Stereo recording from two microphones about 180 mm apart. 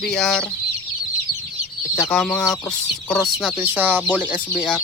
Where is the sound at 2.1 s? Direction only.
5° left (ahead or behind).